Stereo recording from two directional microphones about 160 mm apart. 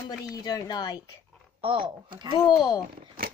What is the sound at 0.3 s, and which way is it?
Speech, 25° left (ahead or behind).